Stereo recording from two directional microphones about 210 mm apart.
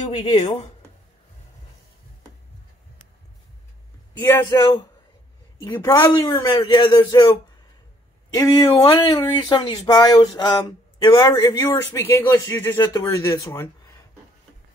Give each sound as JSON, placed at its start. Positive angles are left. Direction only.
{"t": 0.2, "sound": "a man's voice", "side_deg": 20}
{"t": 4.2, "sound": "a man's voice", "side_deg": 15}